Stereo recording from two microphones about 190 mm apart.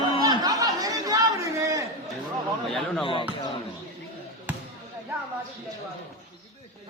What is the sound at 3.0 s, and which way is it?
Speech, 25° left (ahead or behind).